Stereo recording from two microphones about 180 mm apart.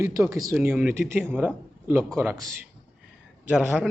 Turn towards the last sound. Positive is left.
turn(degrees=-5)  # may be behind; listen again after turning